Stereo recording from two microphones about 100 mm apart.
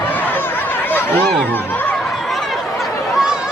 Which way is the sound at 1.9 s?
Centre (ahead or behind).